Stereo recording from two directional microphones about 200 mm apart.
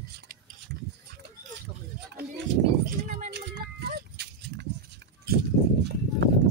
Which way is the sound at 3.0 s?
35° right (ahead or behind).